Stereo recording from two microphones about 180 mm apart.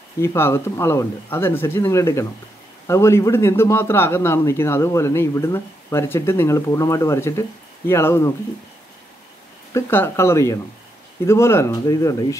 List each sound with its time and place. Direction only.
0.2 s speech: 15° left (ahead or behind)
9.8 s speech: 10° left (ahead or behind)